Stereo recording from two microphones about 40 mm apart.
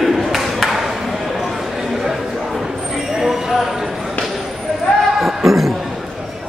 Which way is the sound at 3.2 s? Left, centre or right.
Centre.